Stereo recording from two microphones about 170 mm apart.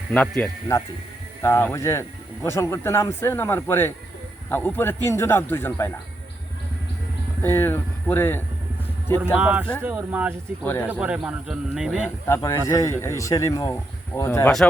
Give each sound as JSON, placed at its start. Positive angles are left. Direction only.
{"t": 0.1, "sound": "speech", "side_deg": 5}
{"t": 7.4, "sound": "speech", "side_deg": 15}
{"t": 9.3, "sound": "speech", "side_deg": -10}
{"t": 10.6, "sound": "speech", "side_deg": 10}
{"t": 11.0, "sound": "speech", "side_deg": -5}
{"t": 12.3, "sound": "speech", "side_deg": 15}